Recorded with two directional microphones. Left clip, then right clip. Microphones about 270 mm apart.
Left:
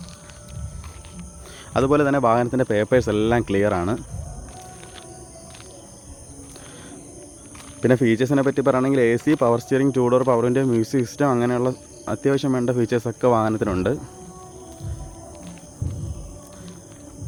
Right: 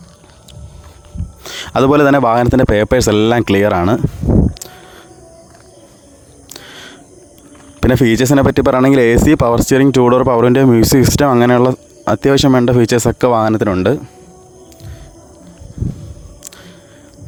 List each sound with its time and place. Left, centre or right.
1.5 s speech: right
6.5 s a sound: right
7.8 s speech: right